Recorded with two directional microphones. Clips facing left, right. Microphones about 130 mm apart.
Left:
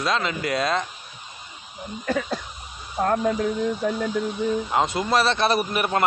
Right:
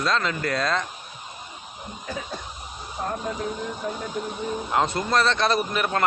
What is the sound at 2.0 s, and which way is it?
Cough, 75° left (ahead or behind).